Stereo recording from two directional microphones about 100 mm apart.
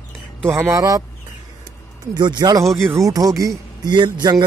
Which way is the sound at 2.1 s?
45° right (ahead or behind).